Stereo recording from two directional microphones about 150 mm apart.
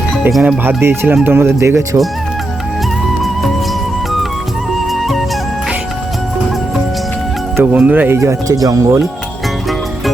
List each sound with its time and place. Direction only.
0.3 s speech: centre (ahead or behind)
0.6 s speech: 15° right (ahead or behind)
7.5 s speech: 10° right (ahead or behind)